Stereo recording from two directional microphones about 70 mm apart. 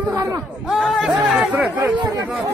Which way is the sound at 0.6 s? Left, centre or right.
Centre.